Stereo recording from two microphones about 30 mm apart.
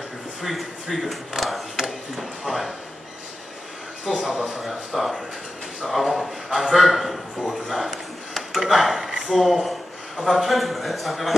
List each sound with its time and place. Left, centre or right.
0.4 s a man's voice: centre
1.3 s a sound: right
1.9 s speech: centre
4.3 s speech: centre
7.4 s a sound: centre
8.7 s speech: centre